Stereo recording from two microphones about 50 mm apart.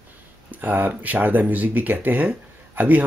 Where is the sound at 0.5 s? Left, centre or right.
Right.